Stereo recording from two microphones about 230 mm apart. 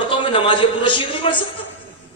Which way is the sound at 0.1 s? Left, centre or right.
Left.